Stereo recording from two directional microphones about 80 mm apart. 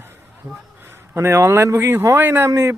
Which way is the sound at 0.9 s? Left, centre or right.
Right.